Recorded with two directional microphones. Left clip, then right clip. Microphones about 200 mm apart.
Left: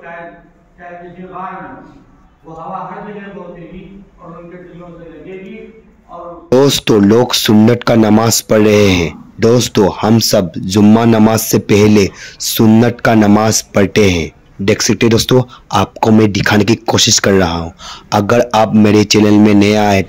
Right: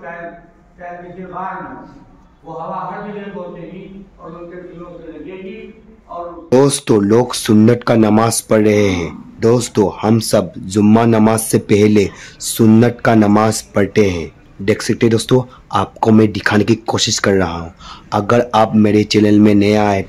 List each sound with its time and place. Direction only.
6.5 s speech: 20° left (ahead or behind)